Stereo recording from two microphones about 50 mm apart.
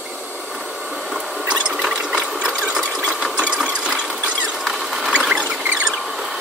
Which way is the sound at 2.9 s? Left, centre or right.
Centre.